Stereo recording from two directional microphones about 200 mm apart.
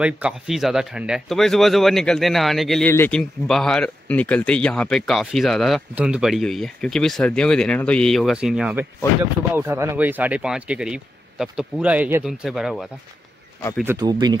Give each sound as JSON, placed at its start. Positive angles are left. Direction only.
{"t": 0.0, "sound": "speech", "side_deg": -5}
{"t": 13.9, "sound": "speech", "side_deg": -20}